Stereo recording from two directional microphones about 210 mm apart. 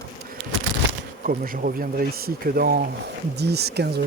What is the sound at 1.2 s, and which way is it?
Bee, 40° right (ahead or behind).